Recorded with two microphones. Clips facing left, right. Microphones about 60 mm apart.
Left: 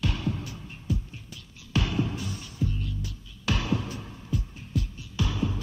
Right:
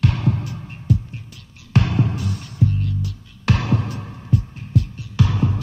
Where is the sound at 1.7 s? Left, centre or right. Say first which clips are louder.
Right 7 dB; right.